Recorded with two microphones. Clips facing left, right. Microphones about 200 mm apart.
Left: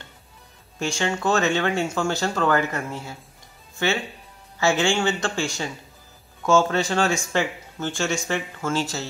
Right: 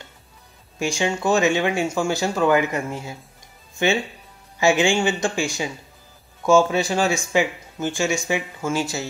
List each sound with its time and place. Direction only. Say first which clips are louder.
0.7 s speech: right 2 dB; 10° right (ahead or behind)